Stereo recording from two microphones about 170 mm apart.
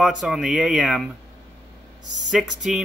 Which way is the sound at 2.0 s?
90° left.